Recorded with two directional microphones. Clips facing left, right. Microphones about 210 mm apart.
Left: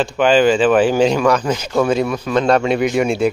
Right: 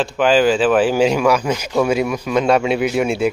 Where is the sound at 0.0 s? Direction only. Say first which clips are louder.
Left 1 dB; 5° right (ahead or behind).